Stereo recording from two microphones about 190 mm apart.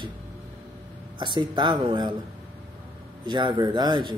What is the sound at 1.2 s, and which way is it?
Speech, 25° right (ahead or behind).